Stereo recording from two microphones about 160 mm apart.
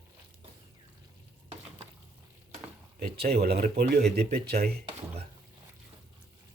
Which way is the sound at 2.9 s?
80° right.